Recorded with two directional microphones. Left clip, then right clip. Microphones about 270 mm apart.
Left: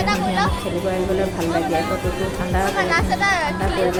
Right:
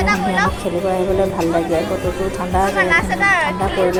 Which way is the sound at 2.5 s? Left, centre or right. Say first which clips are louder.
Right 5 dB; centre.